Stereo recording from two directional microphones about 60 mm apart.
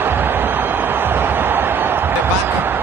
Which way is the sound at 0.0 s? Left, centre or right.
Right.